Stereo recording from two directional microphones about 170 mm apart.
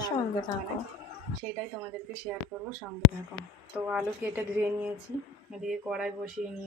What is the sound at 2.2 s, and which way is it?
Speech, 5° right (ahead or behind).